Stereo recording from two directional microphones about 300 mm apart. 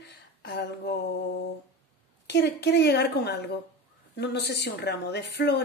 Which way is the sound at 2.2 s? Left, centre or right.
Left.